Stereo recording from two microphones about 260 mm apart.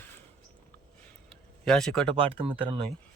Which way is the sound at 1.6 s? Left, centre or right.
Centre.